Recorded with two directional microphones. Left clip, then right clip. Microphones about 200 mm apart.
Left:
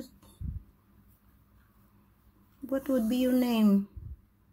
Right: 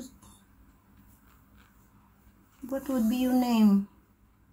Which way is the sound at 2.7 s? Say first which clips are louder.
Left 1 dB; 20° left (ahead or behind).